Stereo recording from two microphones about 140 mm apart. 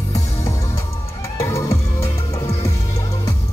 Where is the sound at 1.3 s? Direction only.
20° left (ahead or behind).